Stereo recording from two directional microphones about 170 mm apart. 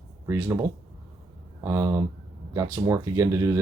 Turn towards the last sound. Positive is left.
turn(degrees=-20)  # may be behind; listen again after turning